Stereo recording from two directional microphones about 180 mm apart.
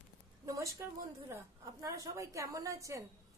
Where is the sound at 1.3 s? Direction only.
15° right (ahead or behind).